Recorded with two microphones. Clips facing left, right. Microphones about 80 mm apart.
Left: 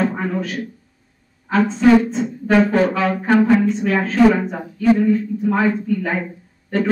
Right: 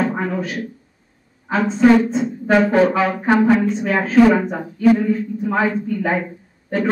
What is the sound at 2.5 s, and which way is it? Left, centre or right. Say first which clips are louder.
A woman's voice: right 1 dB; centre.